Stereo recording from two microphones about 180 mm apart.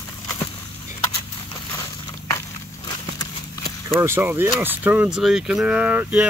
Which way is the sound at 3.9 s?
15° right (ahead or behind).